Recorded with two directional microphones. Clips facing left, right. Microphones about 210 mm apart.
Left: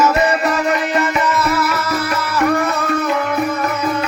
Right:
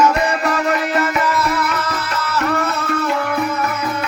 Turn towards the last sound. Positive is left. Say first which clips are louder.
# left 2 dB
turn(degrees=15)  # may be behind; listen again after turning